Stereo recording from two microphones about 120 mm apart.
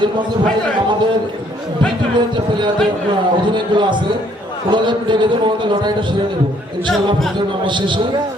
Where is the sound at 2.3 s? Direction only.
40° right (ahead or behind).